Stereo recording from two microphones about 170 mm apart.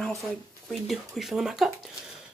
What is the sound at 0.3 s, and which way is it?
A woman's voice, centre (ahead or behind).